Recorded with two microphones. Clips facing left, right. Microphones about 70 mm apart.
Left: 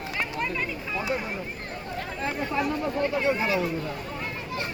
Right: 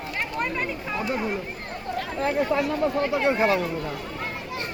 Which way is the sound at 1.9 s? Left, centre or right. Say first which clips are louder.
Right 6 dB; right.